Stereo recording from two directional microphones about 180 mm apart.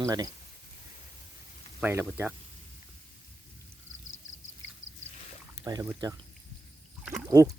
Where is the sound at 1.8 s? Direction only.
10° right (ahead or behind).